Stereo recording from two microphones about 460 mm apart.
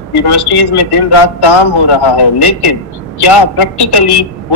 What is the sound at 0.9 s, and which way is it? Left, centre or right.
A woman's voice, left.